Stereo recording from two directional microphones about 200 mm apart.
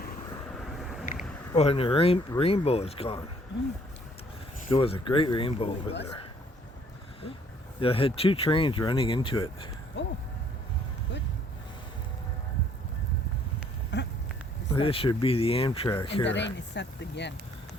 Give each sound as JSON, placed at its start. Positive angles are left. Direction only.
{"t": 0.6, "sound": "vehicle", "side_deg": 0}
{"t": 1.5, "sound": "speech", "side_deg": 30}
{"t": 4.7, "sound": "speech", "side_deg": 25}
{"t": 7.8, "sound": "speech", "side_deg": 25}
{"t": 10.0, "sound": "speech", "side_deg": 60}
{"t": 13.9, "sound": "a sound", "side_deg": 60}
{"t": 14.7, "sound": "speech", "side_deg": 25}
{"t": 16.2, "sound": "speech", "side_deg": 60}